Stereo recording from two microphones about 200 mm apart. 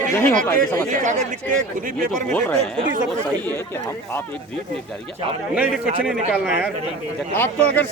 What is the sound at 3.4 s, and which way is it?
Speech, 10° left (ahead or behind).